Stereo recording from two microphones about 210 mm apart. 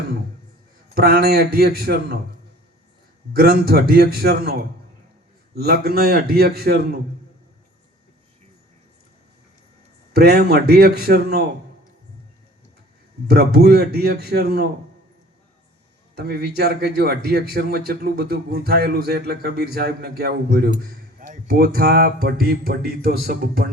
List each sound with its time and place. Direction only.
0.9 s a man's voice: 45° right (ahead or behind)
3.3 s a man's voice: 45° right (ahead or behind)
10.1 s a man's voice: 50° right (ahead or behind)
13.2 s a man's voice: 50° right (ahead or behind)
16.1 s a man's voice: 50° right (ahead or behind)